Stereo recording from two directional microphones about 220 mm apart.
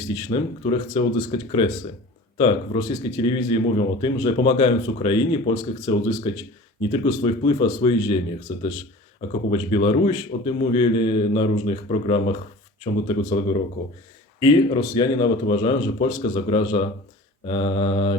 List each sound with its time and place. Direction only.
0.1 s speech: 20° left (ahead or behind)
9.5 s speech: 25° left (ahead or behind)